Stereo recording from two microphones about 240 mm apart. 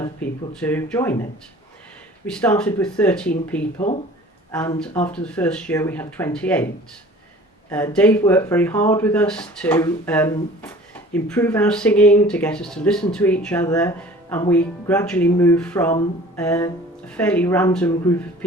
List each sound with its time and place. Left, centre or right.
0.0 s speech: centre
2.2 s speech: centre
3.8 s speech: left
5.1 s speech: centre
7.7 s speech: centre
16.3 s music: centre
17.1 s speech: centre